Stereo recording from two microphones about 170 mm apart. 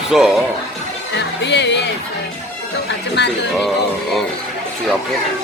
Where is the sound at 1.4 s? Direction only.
90° left.